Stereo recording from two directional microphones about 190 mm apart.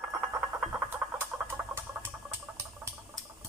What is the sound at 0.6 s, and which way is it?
Frog, 10° right (ahead or behind).